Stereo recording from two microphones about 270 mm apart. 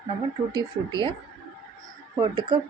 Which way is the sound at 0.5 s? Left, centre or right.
Centre.